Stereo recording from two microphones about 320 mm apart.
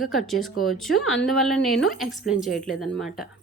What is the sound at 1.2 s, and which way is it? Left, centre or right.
A woman's voice, centre.